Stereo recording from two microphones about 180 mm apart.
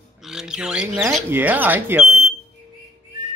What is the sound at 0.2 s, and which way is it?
Speech, 5° right (ahead or behind).